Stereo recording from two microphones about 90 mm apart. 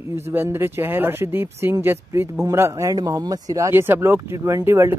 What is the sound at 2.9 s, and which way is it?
Speech, 45° right (ahead or behind).